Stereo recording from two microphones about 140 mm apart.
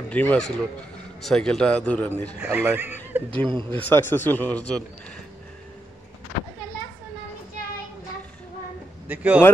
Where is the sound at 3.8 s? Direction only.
15° left (ahead or behind).